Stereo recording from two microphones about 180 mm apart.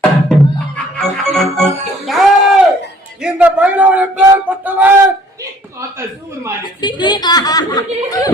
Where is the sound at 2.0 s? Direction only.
Centre (ahead or behind).